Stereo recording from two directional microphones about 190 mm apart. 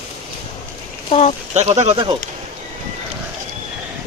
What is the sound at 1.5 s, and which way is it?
Speech, 35° right (ahead or behind).